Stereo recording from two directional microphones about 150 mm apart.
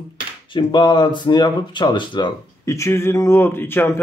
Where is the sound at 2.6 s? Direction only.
20° left (ahead or behind).